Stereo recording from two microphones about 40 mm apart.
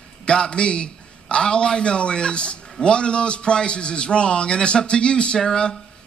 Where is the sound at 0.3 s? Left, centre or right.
Left.